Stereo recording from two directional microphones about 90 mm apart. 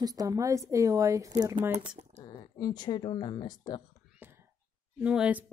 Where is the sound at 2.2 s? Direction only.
50° left (ahead or behind).